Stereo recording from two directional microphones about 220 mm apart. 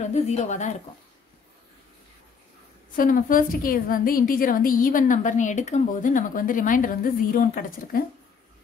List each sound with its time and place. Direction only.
0.0 s a woman's voice: 30° left (ahead or behind)
3.0 s a woman's voice: 40° left (ahead or behind)